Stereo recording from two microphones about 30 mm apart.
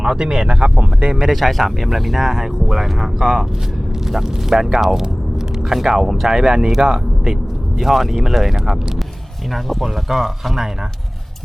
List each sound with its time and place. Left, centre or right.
0.0 s speech: right
1.3 s speech: centre; by 7.3 s right
7.8 s speech: centre
9.8 s speech: centre